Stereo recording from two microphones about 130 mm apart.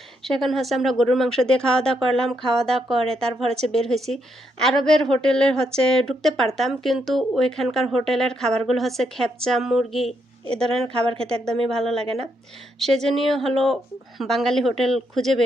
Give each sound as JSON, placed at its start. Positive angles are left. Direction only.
{"t": 0.2, "sound": "speech", "side_deg": 0}
{"t": 10.4, "sound": "a woman's voice", "side_deg": -50}
{"t": 11.7, "sound": "speech", "side_deg": 5}
{"t": 11.9, "sound": "a woman's voice", "side_deg": -50}
{"t": 13.0, "sound": "speech", "side_deg": 0}